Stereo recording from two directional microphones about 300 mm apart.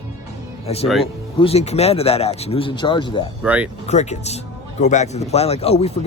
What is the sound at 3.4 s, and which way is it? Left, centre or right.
Speech, centre.